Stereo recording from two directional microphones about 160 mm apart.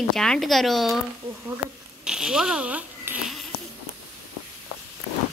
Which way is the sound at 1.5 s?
5° right (ahead or behind).